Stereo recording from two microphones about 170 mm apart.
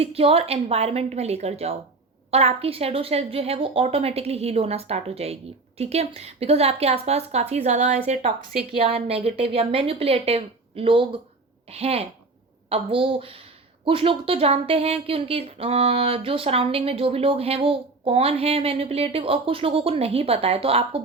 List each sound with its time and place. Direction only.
0.0 s a woman's voice: 35° right (ahead or behind)